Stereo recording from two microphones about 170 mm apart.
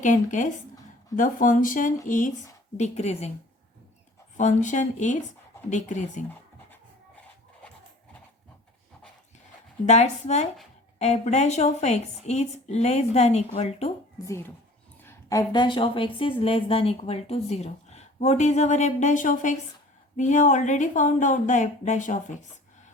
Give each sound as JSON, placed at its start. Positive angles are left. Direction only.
{"t": 0.0, "sound": "a woman's voice", "side_deg": 45}
{"t": 4.4, "sound": "speech", "side_deg": 45}
{"t": 9.8, "sound": "a woman's voice", "side_deg": 40}
{"t": 14.3, "sound": "a woman's voice", "side_deg": 15}